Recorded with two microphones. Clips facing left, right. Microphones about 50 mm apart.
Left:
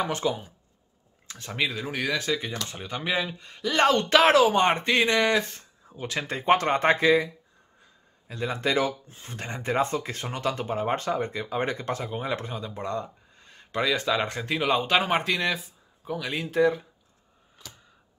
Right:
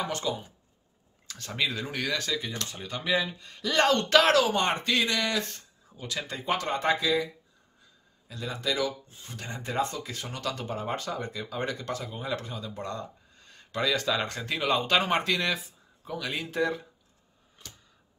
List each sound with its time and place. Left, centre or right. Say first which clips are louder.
0.0 s speech: left 4 dB; left
1.2 s a sound: left 1 dB; left
1.5 s speech: left 2 dB; centre; by 7.2 s left
8.3 s speech: left 5 dB; left; by 16.8 s centre